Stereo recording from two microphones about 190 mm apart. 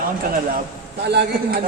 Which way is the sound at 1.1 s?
60° right (ahead or behind).